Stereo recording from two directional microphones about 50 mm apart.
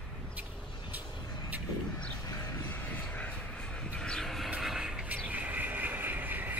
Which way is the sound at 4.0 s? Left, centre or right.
Centre.